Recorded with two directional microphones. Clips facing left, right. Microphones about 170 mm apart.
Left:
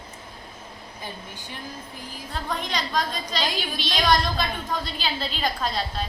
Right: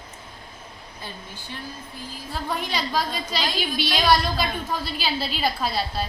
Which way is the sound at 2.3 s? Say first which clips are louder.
Right 1 dB; 5° right (ahead or behind).